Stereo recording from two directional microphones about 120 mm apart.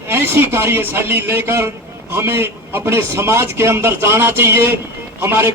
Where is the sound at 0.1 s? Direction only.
20° right (ahead or behind).